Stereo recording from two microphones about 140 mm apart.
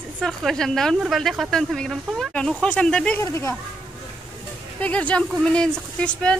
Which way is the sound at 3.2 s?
20° left (ahead or behind).